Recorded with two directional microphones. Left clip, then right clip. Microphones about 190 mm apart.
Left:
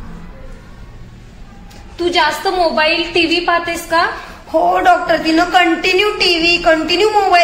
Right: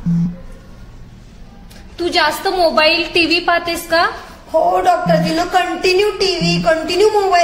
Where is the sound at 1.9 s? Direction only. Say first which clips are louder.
Left 1 dB; 15° right (ahead or behind).